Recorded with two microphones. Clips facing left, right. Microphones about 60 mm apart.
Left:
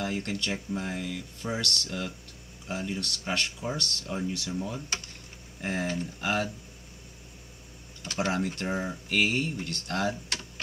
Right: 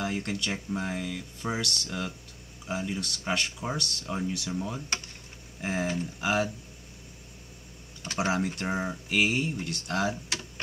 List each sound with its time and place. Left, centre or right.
0.0 s speech: centre
8.0 s speech: right
8.3 s speech: centre